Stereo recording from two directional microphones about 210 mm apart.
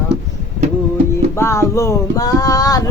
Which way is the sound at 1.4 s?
15° left (ahead or behind).